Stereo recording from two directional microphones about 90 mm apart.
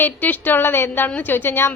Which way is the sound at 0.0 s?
20° left (ahead or behind).